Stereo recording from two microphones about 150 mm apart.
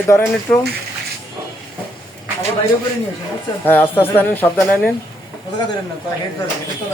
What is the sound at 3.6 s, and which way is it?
Speech, 10° left (ahead or behind).